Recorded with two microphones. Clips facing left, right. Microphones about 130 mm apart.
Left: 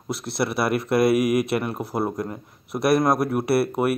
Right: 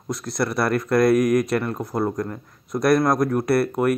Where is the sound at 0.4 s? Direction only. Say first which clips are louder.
Right 1 dB; 5° left (ahead or behind).